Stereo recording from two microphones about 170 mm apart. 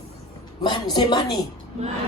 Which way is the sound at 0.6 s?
25° left (ahead or behind).